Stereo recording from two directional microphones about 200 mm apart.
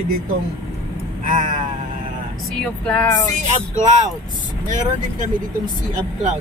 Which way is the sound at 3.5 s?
35° right (ahead or behind).